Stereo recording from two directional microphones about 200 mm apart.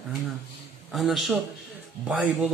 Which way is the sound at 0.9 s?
Centre (ahead or behind).